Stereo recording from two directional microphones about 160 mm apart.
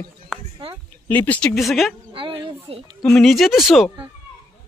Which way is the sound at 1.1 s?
10° left (ahead or behind).